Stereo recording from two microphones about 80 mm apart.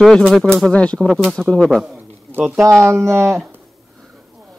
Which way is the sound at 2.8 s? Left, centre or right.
Right.